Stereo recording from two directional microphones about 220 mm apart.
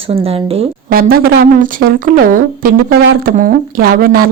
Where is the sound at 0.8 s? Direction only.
40° right (ahead or behind).